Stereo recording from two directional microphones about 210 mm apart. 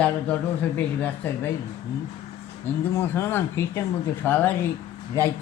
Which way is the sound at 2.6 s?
10° left (ahead or behind).